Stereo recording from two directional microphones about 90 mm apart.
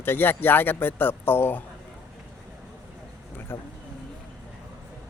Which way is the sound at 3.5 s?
25° left (ahead or behind).